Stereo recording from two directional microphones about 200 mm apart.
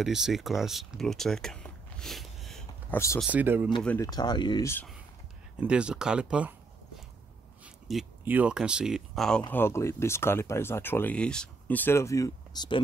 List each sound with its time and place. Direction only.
0.0 s speech: centre (ahead or behind)
3.8 s speech: 10° left (ahead or behind)
4.1 s speech: 20° left (ahead or behind)
5.6 s speech: 5° right (ahead or behind)
7.6 s speech: 5° right (ahead or behind); by 12.8 s 20° left (ahead or behind)